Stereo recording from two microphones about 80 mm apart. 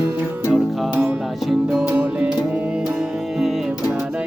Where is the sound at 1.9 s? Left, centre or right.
Centre.